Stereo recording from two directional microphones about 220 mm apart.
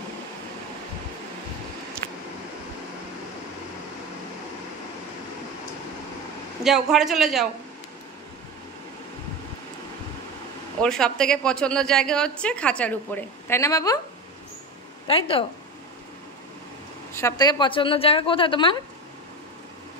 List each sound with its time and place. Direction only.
6.6 s a woman's voice: centre (ahead or behind)
10.8 s a woman's voice: 5° left (ahead or behind)
15.0 s a woman's voice: 25° left (ahead or behind)
17.1 s a woman's voice: 15° left (ahead or behind)